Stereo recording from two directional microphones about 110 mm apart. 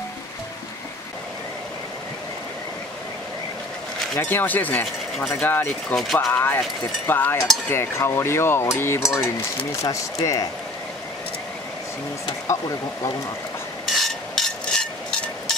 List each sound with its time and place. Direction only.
4.2 s speech: 20° left (ahead or behind)
5.3 s cutlery: 20° left (ahead or behind)
9.8 s speech: 30° left (ahead or behind)
13.8 s a sound: centre (ahead or behind)